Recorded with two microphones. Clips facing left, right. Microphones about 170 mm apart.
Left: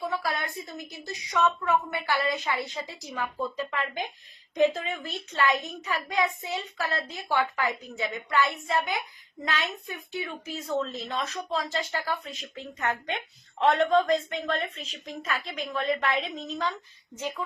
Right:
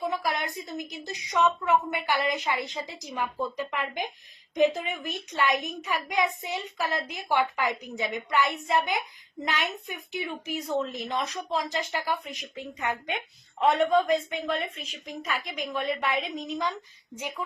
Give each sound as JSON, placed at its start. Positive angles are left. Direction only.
{"t": 0.0, "sound": "a woman's voice", "side_deg": -15}